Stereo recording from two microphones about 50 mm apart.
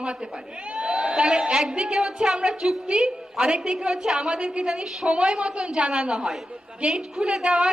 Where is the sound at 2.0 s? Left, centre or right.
Centre.